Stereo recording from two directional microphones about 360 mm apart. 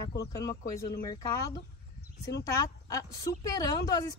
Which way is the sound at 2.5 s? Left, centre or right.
Centre.